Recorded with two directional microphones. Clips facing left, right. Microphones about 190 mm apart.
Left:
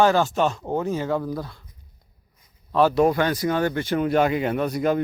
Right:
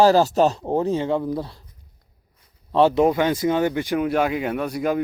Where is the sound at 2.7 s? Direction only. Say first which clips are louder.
Right 1 dB; 25° right (ahead or behind); by 5.0 s 5° right (ahead or behind).